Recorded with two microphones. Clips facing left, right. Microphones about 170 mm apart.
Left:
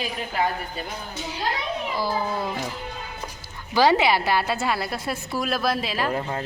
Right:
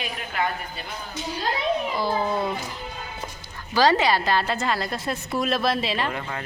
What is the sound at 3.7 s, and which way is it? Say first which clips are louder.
A woman's voice: left 1 dB; 10° left (ahead or behind).